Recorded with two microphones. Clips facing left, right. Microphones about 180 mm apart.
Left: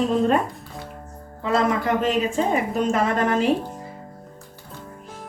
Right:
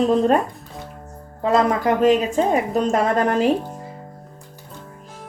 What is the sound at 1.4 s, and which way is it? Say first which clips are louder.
A woman's voice: right 3 dB; 40° right (ahead or behind).